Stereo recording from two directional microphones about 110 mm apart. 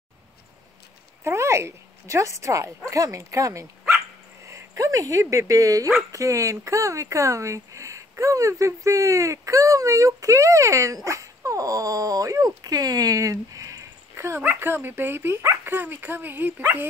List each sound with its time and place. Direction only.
1.2 s speech: 25° right (ahead or behind)
4.5 s a sound: 30° right (ahead or behind)
5.2 s speech: 25° right (ahead or behind)